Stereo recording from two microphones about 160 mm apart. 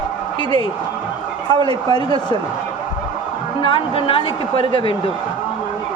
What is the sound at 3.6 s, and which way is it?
A woman's voice, 35° left (ahead or behind).